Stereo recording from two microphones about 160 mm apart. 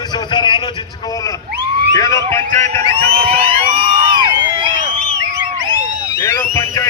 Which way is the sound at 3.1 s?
35° right (ahead or behind).